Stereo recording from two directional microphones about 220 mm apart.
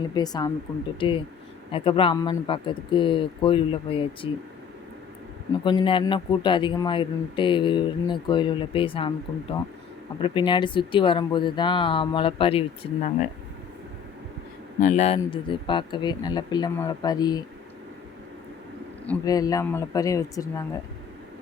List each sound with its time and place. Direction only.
0.1 s speech: 20° left (ahead or behind)
5.6 s speech: 20° left (ahead or behind)
14.8 s speech: 30° left (ahead or behind)
19.0 s speech: 15° left (ahead or behind)